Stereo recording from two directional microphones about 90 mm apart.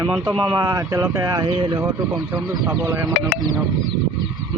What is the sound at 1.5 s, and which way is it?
Speech, 60° right (ahead or behind).